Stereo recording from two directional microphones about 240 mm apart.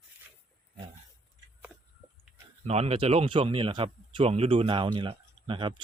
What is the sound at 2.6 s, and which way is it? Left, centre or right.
Speech, right.